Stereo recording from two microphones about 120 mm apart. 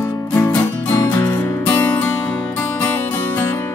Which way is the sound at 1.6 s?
15° left (ahead or behind).